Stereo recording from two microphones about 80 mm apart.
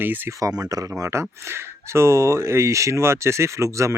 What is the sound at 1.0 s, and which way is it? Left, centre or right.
Speech, right.